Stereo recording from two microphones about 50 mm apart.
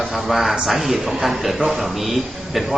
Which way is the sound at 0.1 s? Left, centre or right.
Centre.